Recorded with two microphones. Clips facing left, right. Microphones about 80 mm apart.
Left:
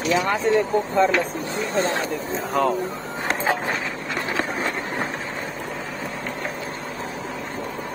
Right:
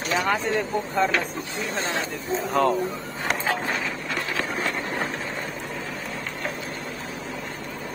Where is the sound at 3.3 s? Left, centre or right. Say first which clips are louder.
Left 2 dB; left.